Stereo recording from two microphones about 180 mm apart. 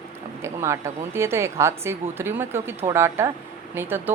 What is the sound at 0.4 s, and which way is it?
A woman's voice, 15° right (ahead or behind).